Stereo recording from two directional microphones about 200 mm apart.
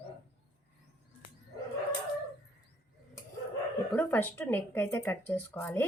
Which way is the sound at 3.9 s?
10° left (ahead or behind).